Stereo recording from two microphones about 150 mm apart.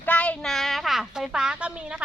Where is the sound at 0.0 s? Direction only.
10° left (ahead or behind).